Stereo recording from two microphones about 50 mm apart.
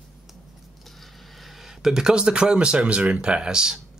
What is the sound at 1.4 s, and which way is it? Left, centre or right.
Speech, centre.